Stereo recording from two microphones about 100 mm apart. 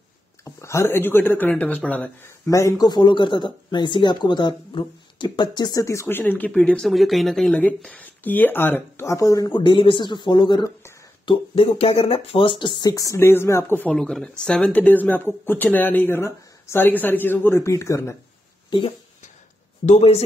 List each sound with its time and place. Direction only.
0.6 s speech: 30° left (ahead or behind)
2.4 s speech: 30° left (ahead or behind)
2.9 s speech: 55° left (ahead or behind)
5.9 s speech: 25° left (ahead or behind)
9.6 s speech: 55° left (ahead or behind)
11.2 s speech: 65° left (ahead or behind)
12.9 s speech: 30° left (ahead or behind)
13.9 s speech: 5° left (ahead or behind); by 18.1 s 30° left (ahead or behind)
18.7 s speech: 65° left (ahead or behind)